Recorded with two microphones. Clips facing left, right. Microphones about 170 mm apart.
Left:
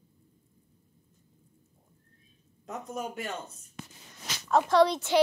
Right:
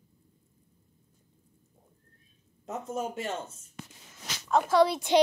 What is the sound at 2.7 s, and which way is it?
Speech, 25° right (ahead or behind).